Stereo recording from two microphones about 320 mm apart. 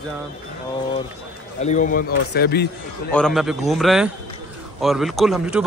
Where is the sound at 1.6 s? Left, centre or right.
Left.